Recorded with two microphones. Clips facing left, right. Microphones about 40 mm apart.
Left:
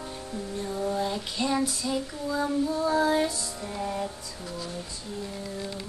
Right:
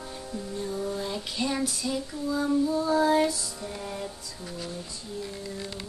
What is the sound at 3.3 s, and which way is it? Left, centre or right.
Music, left.